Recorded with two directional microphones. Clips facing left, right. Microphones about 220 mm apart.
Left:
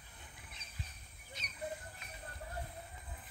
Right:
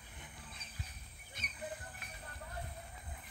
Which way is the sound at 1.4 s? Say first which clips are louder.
Right 3 dB; 55° right (ahead or behind).